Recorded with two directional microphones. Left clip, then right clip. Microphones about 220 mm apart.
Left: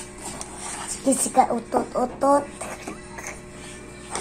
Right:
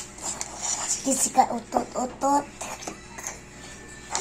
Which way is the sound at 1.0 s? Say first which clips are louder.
Left 3 dB; 20° left (ahead or behind).